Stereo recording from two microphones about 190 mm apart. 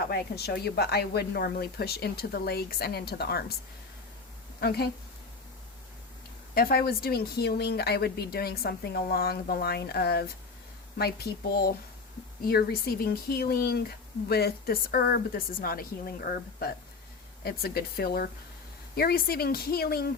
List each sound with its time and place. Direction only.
0.1 s speech: 60° left (ahead or behind)
4.6 s speech: 55° left (ahead or behind)
6.5 s a woman's voice: 55° left (ahead or behind)